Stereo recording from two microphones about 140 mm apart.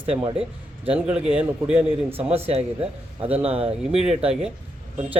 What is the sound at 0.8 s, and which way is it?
A man's voice, 10° right (ahead or behind).